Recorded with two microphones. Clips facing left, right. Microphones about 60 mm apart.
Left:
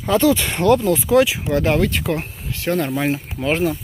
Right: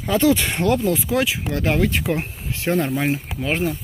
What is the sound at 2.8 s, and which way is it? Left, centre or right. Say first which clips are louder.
Speech: left 1 dB; centre.